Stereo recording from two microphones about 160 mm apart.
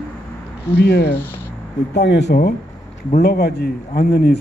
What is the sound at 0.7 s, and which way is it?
A man's voice, 90° left.